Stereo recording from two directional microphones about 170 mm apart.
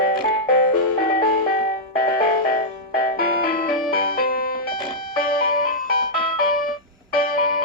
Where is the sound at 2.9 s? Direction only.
60° left (ahead or behind).